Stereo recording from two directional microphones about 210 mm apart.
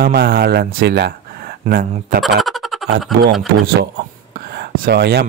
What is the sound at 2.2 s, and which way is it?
Music, centre (ahead or behind).